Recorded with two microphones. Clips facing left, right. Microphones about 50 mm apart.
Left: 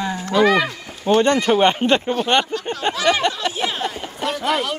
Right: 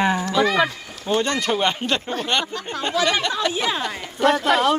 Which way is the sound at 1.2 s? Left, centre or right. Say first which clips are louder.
Left 6 dB; left.